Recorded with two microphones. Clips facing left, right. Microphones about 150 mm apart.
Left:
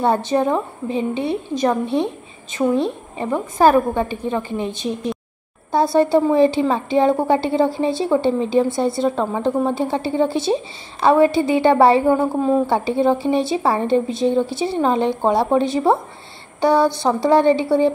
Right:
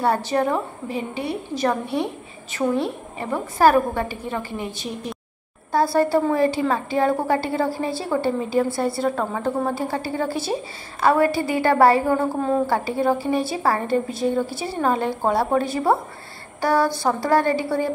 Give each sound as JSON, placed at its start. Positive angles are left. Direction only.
{"t": 0.0, "sound": "a woman's voice", "side_deg": 20}
{"t": 5.9, "sound": "a woman's voice", "side_deg": 20}